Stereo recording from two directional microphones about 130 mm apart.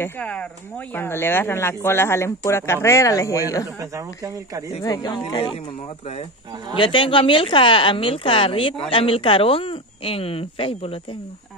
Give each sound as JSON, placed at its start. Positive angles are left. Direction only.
{"t": 0.0, "sound": "speech", "side_deg": 10}
{"t": 3.8, "sound": "speech", "side_deg": -25}
{"t": 4.8, "sound": "speech", "side_deg": 30}
{"t": 6.8, "sound": "a woman's voice", "side_deg": 40}